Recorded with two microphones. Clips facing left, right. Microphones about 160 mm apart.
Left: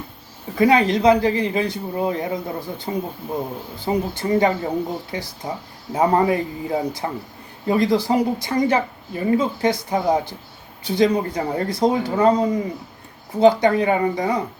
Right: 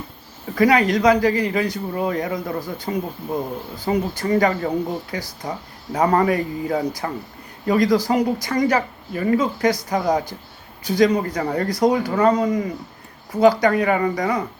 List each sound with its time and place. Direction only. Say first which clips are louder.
0.5 s speech: even; 25° left (ahead or behind)